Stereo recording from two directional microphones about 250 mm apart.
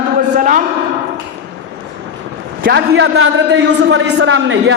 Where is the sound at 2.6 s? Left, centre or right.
Right.